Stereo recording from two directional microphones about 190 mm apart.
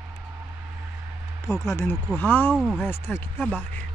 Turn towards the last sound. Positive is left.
turn(degrees=5)  # may be behind; listen again after turning